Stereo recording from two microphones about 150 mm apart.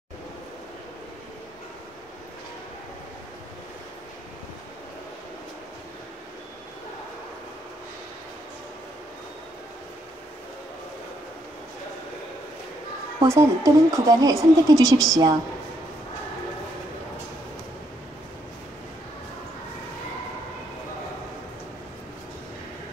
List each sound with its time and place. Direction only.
13.2 s speech: 20° right (ahead or behind)